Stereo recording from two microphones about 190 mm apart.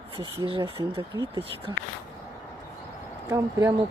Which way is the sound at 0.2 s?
30° right (ahead or behind).